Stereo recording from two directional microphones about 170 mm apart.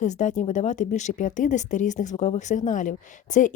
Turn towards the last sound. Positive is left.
turn(degrees=45)  # may be behind; listen again after turning